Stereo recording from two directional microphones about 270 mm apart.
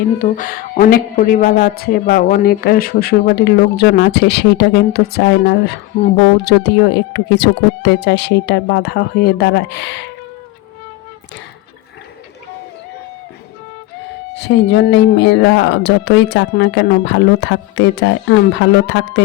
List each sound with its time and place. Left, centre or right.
0.2 s a woman's voice: left
14.3 s a woman's voice: left